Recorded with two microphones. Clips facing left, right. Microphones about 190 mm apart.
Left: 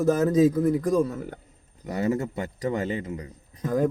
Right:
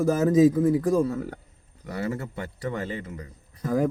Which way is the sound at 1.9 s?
20° left (ahead or behind).